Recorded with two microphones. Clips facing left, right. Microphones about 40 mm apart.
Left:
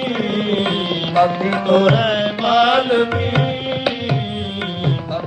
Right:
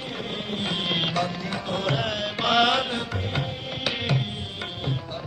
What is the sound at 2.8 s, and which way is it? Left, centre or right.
Music, left.